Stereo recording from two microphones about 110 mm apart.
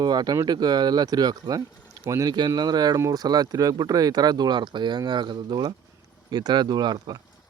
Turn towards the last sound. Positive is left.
turn(degrees=-35)  # may be behind; listen again after turning